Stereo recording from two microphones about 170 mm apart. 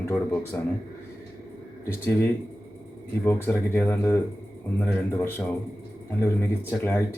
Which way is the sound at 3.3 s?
10° left (ahead or behind).